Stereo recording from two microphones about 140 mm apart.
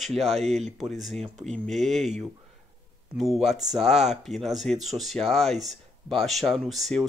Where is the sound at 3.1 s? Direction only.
Centre (ahead or behind).